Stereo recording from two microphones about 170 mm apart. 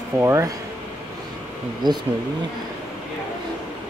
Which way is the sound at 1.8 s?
25° right (ahead or behind).